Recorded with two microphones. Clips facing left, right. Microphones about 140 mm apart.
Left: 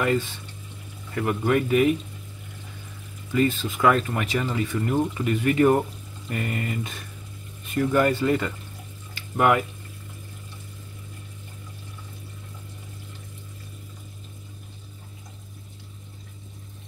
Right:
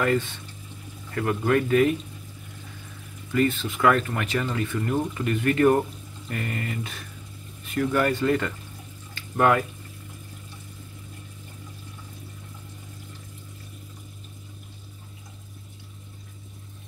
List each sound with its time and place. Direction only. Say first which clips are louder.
1.1 s speech: even; 10° left (ahead or behind)
3.3 s speech: left 1 dB; 15° left (ahead or behind)